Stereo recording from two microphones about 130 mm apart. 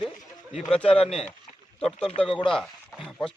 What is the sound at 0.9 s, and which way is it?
Speech, 50° left (ahead or behind).